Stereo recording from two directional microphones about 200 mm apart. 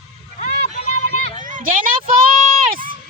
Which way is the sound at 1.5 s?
45° right (ahead or behind).